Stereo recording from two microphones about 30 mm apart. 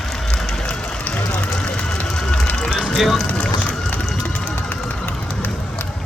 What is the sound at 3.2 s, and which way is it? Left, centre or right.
Vehicle, left.